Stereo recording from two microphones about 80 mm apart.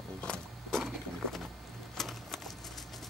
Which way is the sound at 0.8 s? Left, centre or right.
Centre.